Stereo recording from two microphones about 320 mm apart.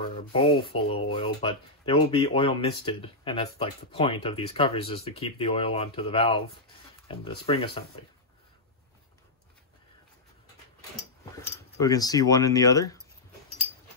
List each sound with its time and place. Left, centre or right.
0.2 s speech: centre
11.3 s speech: centre